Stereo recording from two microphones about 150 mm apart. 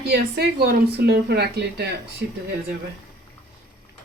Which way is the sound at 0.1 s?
90° right.